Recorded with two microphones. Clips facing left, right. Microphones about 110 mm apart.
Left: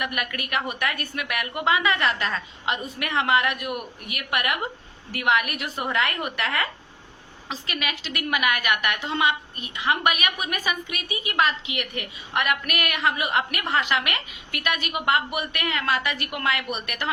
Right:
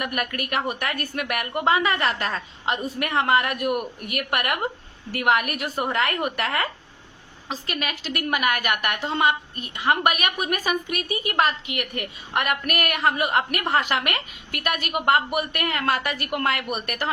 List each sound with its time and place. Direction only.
0.0 s a woman's voice: 40° right (ahead or behind)